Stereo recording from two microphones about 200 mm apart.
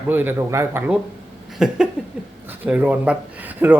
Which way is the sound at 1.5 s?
5° right (ahead or behind).